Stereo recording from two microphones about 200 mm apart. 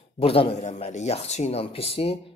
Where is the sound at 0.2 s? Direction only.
30° left (ahead or behind).